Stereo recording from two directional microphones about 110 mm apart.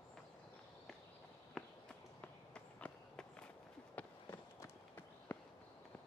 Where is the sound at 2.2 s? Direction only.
10° left (ahead or behind).